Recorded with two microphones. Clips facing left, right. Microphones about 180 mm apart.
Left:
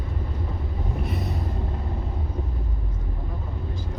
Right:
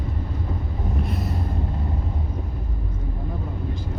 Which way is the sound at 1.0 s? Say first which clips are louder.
Right 1 dB; centre (ahead or behind).